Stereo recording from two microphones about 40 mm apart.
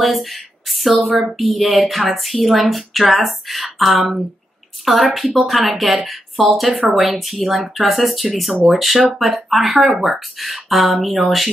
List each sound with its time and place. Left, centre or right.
0.0 s speech: centre